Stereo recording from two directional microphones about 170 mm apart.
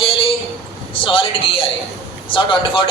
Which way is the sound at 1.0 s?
30° left (ahead or behind).